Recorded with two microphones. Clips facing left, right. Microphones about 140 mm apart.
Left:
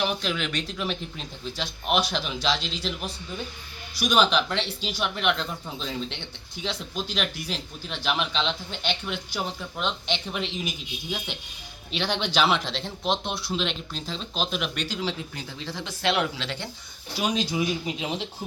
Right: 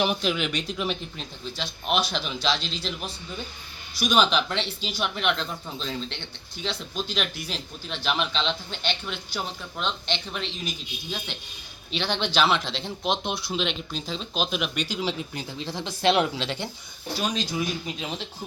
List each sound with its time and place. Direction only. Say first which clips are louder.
0.0 s speech: right 2 dB; 15° right (ahead or behind)
2.0 s speech: even; 5° left (ahead or behind)
11.9 s speech: even; 5° left (ahead or behind)
15.4 s speech: right 2 dB; 15° right (ahead or behind)
17.3 s speech: left 2 dB; 15° left (ahead or behind)